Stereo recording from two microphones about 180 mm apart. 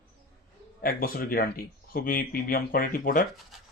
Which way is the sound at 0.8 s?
55° left (ahead or behind).